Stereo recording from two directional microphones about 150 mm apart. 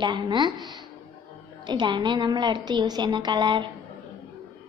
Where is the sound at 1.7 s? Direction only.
30° right (ahead or behind).